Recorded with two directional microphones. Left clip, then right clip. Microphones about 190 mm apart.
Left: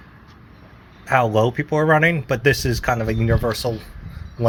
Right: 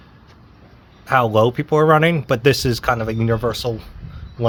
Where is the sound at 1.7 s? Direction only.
25° right (ahead or behind).